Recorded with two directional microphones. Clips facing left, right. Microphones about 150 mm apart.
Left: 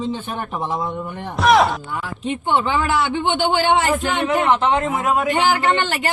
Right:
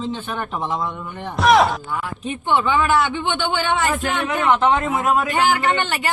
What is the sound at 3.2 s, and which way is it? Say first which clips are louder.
Speech: left 4 dB; 30° left (ahead or behind).